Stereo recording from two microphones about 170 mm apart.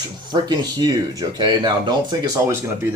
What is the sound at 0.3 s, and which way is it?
Speech, 25° right (ahead or behind).